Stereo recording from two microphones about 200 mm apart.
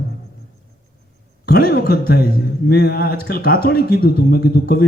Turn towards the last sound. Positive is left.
turn(degrees=50)  # may be behind; listen again after turning